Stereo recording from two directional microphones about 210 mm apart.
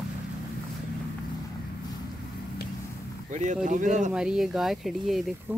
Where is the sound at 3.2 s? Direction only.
35° right (ahead or behind).